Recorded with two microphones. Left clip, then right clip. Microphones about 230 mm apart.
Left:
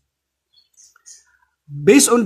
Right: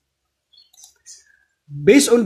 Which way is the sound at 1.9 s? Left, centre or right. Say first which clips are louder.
Even; centre.